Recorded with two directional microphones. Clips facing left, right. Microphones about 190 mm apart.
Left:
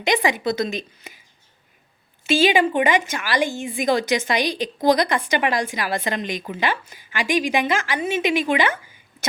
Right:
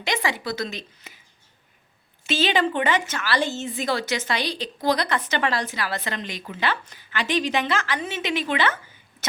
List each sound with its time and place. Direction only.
0.0 s a woman's voice: 15° left (ahead or behind)
1.1 s a sound: 15° left (ahead or behind)
2.2 s a woman's voice: 10° left (ahead or behind)